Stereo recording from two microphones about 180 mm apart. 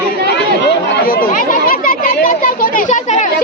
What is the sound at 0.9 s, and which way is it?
Speech, 55° left (ahead or behind).